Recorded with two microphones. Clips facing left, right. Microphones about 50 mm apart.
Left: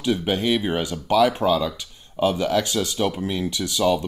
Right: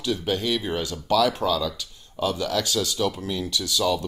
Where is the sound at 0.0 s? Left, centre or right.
Left.